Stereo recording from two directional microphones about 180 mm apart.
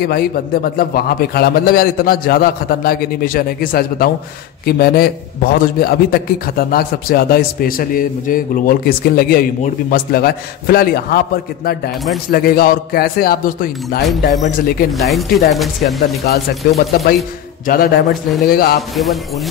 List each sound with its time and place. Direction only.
0.0 s a man's voice: 60° left (ahead or behind)
14.9 s speech: centre (ahead or behind)
16.3 s a man's voice: 60° left (ahead or behind)
18.8 s speech: centre (ahead or behind)